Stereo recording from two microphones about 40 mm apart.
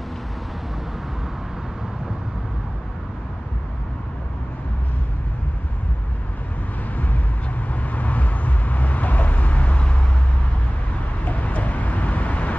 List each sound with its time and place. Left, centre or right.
7.6 s vehicle: left
11.2 s vehicle: left